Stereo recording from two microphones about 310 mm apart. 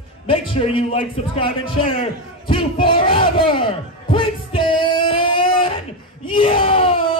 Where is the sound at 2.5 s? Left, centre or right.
Centre.